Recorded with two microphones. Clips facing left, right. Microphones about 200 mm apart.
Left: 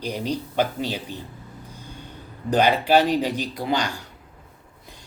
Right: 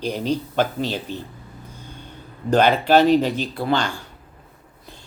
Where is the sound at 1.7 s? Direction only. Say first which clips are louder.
Even; 10° left (ahead or behind).